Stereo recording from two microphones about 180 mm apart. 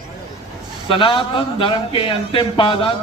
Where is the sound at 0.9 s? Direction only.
30° left (ahead or behind).